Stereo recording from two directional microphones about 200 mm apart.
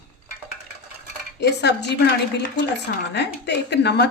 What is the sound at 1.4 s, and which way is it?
Speech, 60° left (ahead or behind).